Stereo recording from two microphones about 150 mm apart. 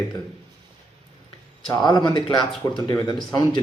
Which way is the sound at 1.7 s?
25° left (ahead or behind).